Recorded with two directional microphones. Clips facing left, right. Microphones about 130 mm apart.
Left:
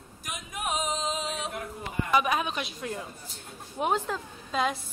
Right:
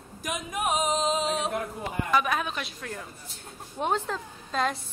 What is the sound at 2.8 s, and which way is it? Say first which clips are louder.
Speech: left 3 dB; 15° left (ahead or behind).